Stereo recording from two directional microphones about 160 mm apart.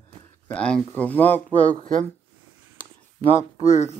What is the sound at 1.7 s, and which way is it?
Speech, 50° right (ahead or behind).